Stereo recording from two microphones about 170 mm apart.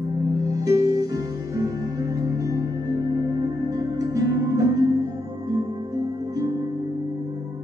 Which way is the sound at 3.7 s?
20° right (ahead or behind).